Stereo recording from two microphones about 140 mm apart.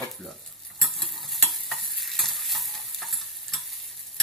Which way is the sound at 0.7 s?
Centre (ahead or behind).